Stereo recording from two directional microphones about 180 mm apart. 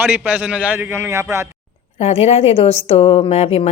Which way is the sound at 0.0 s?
10° right (ahead or behind).